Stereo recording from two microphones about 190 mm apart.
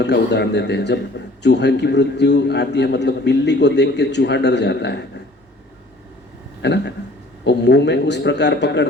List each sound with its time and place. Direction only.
0.0 s a man's voice: 65° left (ahead or behind)
6.6 s a man's voice: 65° left (ahead or behind)